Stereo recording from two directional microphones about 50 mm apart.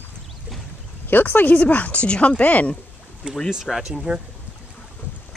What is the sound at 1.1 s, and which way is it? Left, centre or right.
Speech, left.